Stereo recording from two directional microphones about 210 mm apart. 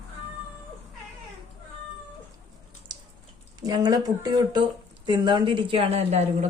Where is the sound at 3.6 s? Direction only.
20° right (ahead or behind).